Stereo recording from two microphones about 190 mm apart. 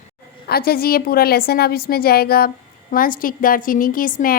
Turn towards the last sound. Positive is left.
turn(degrees=50)  # may be behind; listen again after turning